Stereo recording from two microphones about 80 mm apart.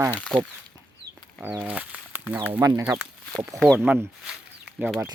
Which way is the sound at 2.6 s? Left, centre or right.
Right.